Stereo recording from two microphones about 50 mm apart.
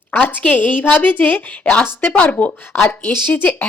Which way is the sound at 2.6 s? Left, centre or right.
Left.